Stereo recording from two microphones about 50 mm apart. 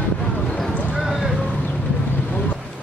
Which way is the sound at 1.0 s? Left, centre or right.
Centre.